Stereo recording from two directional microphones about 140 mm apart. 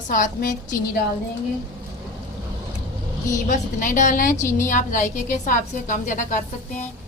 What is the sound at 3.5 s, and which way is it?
Speech, 65° left (ahead or behind).